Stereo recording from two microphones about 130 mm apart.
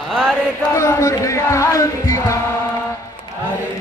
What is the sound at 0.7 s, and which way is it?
Music, 20° left (ahead or behind).